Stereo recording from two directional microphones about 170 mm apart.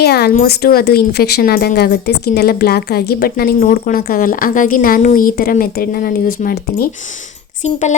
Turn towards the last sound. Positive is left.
turn(degrees=45)  # may be behind; listen again after turning